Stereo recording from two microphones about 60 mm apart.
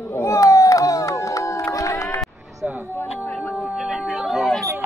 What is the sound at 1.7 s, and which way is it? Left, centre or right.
Run, left.